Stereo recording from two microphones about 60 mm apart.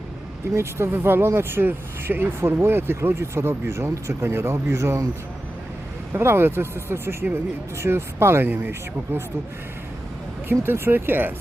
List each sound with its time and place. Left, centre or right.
0.5 s speech: right
6.1 s speech: right
10.5 s speech: right